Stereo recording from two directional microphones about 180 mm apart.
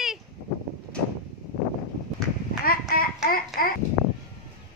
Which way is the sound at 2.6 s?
55° left (ahead or behind).